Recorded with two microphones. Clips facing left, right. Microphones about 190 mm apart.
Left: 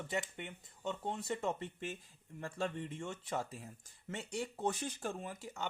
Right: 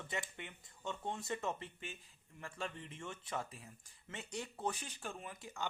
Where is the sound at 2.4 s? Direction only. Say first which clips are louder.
Left 6 dB; 35° left (ahead or behind).